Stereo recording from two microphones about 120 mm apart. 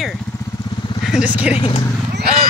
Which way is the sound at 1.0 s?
5° right (ahead or behind).